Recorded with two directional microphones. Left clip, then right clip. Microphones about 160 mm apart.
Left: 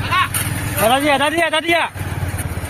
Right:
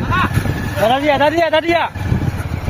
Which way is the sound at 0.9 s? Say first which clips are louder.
Right 2 dB; 30° right (ahead or behind).